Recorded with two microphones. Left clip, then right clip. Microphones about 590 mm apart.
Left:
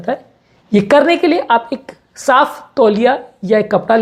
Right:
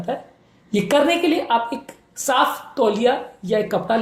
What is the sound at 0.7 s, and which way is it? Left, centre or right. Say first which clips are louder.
A woman's voice: left 7 dB; left.